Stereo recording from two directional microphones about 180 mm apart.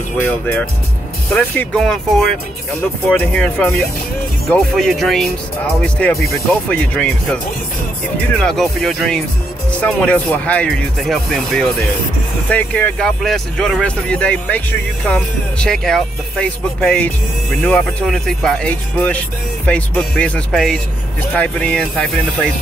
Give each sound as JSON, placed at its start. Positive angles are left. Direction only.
{"t": 0.2, "sound": "speech", "side_deg": 10}